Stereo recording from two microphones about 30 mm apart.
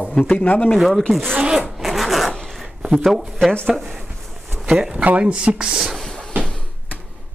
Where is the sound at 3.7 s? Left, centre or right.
Centre.